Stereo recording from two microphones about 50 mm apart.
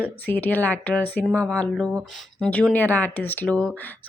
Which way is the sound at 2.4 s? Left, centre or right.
Left.